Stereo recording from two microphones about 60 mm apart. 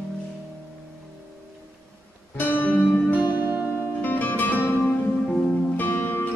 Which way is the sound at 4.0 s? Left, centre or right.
Left.